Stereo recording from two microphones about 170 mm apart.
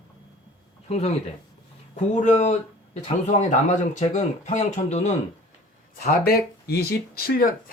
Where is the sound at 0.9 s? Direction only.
40° left (ahead or behind).